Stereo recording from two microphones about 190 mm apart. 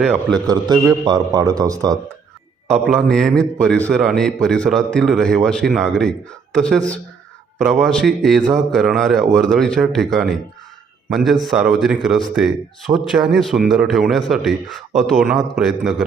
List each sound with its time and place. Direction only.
0.0 s speech: centre (ahead or behind)
0.4 s a man's voice: 20° right (ahead or behind)
2.6 s speech: centre (ahead or behind)